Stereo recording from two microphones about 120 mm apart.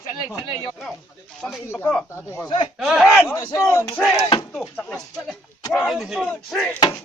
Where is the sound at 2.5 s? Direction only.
45° left (ahead or behind).